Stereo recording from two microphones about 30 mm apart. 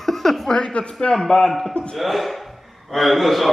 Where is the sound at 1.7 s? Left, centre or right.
Left.